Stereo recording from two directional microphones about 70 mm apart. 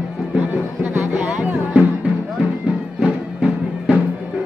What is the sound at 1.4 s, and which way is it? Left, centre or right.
Music, centre.